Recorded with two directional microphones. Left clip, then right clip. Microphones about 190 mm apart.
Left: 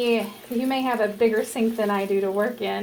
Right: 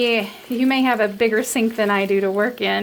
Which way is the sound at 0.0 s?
50° right (ahead or behind).